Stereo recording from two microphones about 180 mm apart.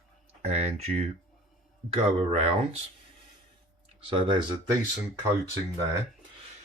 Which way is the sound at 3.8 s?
30° right (ahead or behind).